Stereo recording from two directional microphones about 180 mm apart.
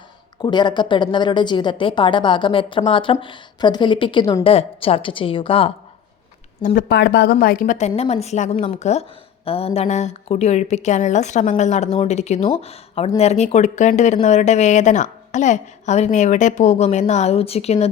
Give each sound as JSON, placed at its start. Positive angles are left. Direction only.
{"t": 0.4, "sound": "a woman's voice", "side_deg": 25}
{"t": 6.6, "sound": "speech", "side_deg": 45}
{"t": 6.8, "sound": "a woman's voice", "side_deg": 65}